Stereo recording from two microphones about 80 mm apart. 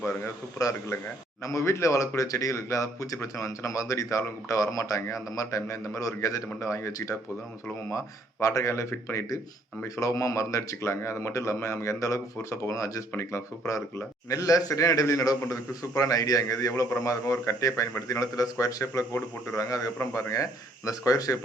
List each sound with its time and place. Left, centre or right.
1.5 s a man's voice: left